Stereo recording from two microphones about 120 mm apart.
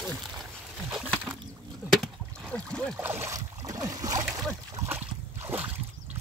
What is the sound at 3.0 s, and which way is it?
Boat, 20° right (ahead or behind).